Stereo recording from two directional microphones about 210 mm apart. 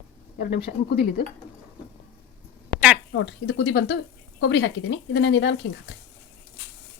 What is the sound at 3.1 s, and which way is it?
Speech, 60° left (ahead or behind).